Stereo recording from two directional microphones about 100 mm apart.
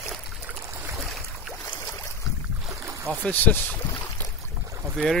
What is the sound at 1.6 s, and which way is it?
Boat, 25° left (ahead or behind).